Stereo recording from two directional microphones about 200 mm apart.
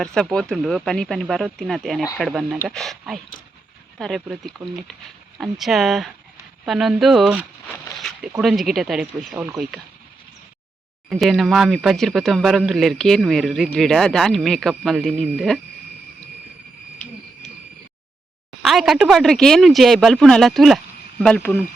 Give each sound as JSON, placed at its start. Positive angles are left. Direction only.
{"t": 0.0, "sound": "speech", "side_deg": 5}
{"t": 11.1, "sound": "speech", "side_deg": 0}
{"t": 18.6, "sound": "speech", "side_deg": 0}